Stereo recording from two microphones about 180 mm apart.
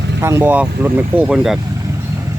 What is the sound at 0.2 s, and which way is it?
Speech, 15° right (ahead or behind).